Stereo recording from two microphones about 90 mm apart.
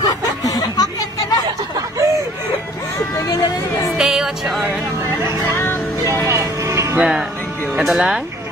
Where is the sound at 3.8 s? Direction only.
5° right (ahead or behind).